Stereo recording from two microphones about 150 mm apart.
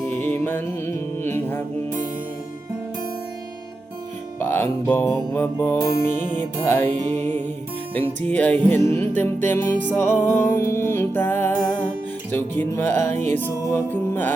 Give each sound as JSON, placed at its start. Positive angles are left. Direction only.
{"t": 0.0, "sound": "music", "side_deg": 10}
{"t": 4.4, "sound": "music", "side_deg": 15}
{"t": 7.2, "sound": "music", "side_deg": -50}
{"t": 7.9, "sound": "music", "side_deg": 10}